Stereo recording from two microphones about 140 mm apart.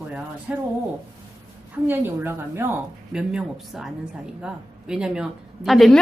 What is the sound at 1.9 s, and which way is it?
A woman's voice, 15° right (ahead or behind).